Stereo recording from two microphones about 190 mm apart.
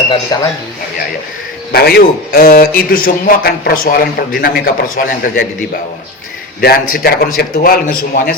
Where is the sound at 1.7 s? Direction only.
55° left (ahead or behind).